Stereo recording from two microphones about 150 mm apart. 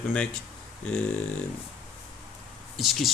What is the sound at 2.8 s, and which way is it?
Speech, centre (ahead or behind).